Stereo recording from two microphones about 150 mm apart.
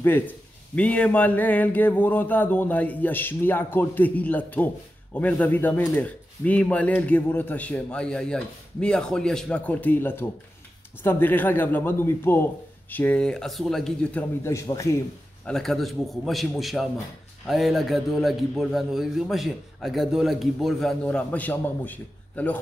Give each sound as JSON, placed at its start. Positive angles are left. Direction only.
{"t": 0.0, "sound": "a man's voice", "side_deg": 10}
{"t": 14.4, "sound": "a man's voice", "side_deg": 20}
{"t": 15.4, "sound": "a man's voice", "side_deg": 0}